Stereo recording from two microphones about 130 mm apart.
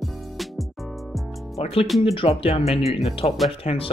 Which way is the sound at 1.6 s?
50° left (ahead or behind).